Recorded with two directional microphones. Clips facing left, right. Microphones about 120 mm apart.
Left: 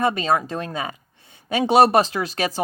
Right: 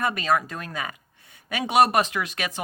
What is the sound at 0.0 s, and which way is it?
Speech, 25° left (ahead or behind).